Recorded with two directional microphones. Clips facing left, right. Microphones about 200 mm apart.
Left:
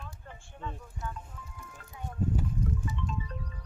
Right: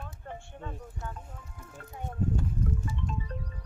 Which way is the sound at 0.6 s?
45° right (ahead or behind).